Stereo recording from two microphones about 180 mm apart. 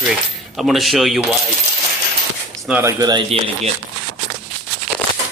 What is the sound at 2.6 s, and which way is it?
Speech, 10° right (ahead or behind).